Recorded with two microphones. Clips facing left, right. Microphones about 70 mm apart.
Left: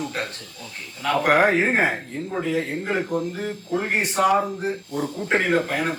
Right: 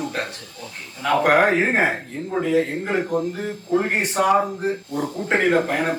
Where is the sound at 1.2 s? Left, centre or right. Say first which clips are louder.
Right 1 dB; centre.